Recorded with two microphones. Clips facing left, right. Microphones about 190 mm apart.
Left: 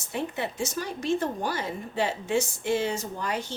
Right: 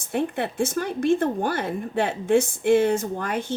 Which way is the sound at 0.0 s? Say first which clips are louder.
Right 6 dB; 55° right (ahead or behind).